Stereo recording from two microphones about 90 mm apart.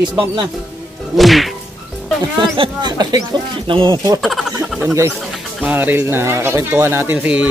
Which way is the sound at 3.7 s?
60° right (ahead or behind).